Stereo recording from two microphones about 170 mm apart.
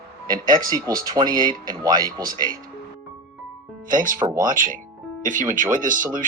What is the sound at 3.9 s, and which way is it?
Speech, 50° right (ahead or behind).